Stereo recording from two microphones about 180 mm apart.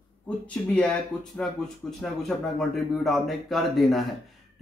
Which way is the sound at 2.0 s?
5° left (ahead or behind).